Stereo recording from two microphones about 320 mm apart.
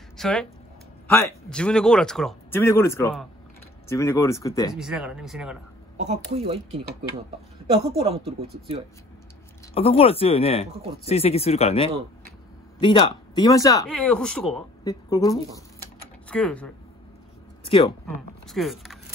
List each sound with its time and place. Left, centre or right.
0.2 s speech: centre
4.7 s speech: centre
5.9 s speech: centre
8.0 s speech: centre
9.8 s speech: centre
17.6 s speech: centre
18.0 s speech: centre